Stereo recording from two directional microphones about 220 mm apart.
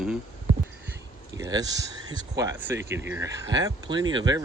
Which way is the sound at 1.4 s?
15° right (ahead or behind).